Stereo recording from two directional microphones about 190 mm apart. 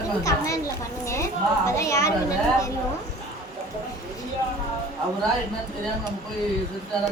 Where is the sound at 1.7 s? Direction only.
15° left (ahead or behind).